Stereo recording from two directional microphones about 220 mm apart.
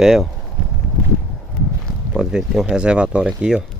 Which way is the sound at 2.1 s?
5° right (ahead or behind).